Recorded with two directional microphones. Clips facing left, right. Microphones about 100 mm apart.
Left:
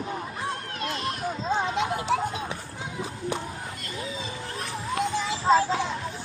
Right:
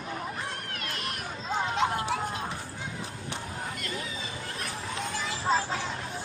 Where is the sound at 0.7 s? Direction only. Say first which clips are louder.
Left 6 dB; 25° left (ahead or behind).